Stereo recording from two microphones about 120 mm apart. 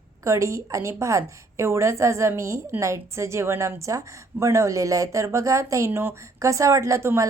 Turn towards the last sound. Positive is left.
turn(degrees=-25)  # may be behind; listen again after turning